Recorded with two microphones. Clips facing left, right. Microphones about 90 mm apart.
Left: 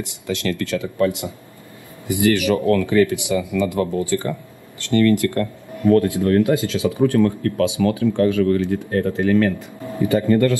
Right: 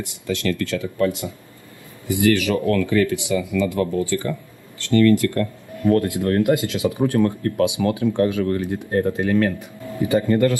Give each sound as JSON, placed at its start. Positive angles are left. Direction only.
{"t": 0.5, "sound": "speech", "side_deg": 20}
{"t": 6.2, "sound": "speech", "side_deg": -15}